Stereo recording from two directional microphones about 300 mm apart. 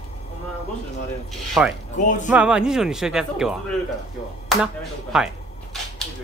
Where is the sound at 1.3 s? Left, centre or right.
Centre.